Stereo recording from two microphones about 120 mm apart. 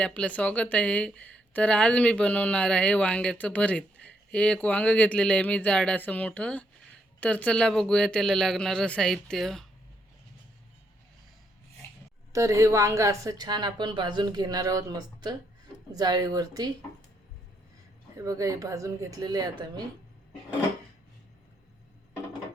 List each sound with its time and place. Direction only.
0.0 s speech: 10° left (ahead or behind)
12.3 s a woman's voice: 25° right (ahead or behind)
18.3 s speech: 30° right (ahead or behind)